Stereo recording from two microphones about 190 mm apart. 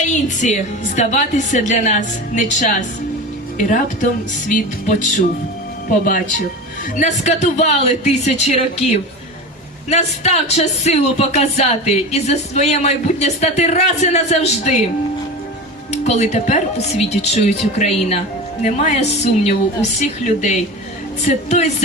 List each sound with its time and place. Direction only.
0.1 s a woman's voice: 40° left (ahead or behind)
6.9 s a woman's voice: 40° left (ahead or behind)
15.9 s a woman's voice: 35° left (ahead or behind)